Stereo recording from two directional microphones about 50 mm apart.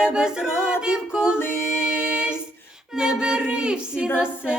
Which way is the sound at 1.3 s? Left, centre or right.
Left.